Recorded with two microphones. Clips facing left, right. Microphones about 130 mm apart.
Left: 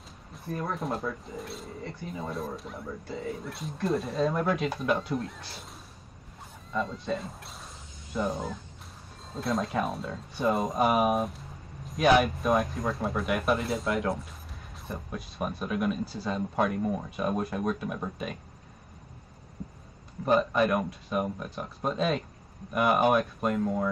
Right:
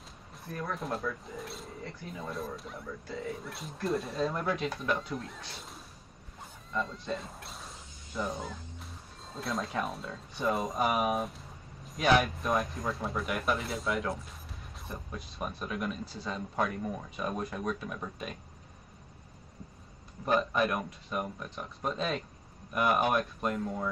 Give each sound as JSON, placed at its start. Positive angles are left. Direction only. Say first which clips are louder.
{"t": 0.5, "sound": "speech", "louder": "left 4 dB", "side_deg": 25}
{"t": 0.7, "sound": "speech", "louder": "left 3 dB", "side_deg": 0}
{"t": 3.1, "sound": "speech", "louder": "left 2 dB", "side_deg": 25}
{"t": 3.3, "sound": "speech", "louder": "left 4 dB", "side_deg": 0}
{"t": 6.7, "sound": "speech", "louder": "left 4 dB", "side_deg": 0}
{"t": 20.3, "sound": "speech", "louder": "left 4 dB", "side_deg": 0}
{"t": 23.6, "sound": "speech", "louder": "left 6 dB", "side_deg": 15}